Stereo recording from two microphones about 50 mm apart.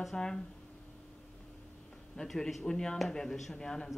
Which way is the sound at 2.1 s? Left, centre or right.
Centre.